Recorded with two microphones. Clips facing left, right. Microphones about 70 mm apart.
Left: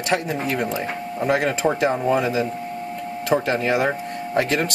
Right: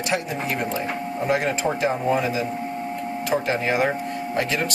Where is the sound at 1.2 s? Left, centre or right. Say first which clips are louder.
Left 2 dB; left.